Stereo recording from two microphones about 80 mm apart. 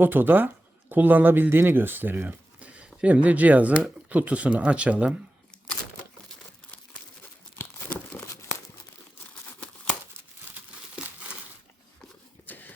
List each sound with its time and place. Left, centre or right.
0.0 s speech: right
7.6 s crumpling: left
11.0 s crumpling: centre
12.5 s a sound: left